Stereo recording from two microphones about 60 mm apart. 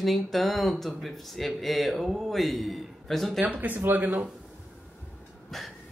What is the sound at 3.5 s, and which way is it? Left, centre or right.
Speech, right.